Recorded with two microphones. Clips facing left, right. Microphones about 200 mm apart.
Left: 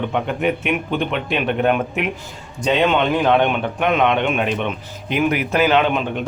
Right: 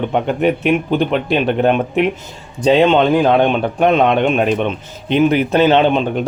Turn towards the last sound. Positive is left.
turn(degrees=-30)  # may be behind; listen again after turning